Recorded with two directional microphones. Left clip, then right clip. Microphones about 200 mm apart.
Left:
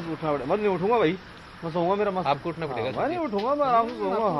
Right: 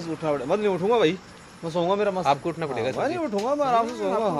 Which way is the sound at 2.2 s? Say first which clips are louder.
Right 3 dB; 60° right (ahead or behind).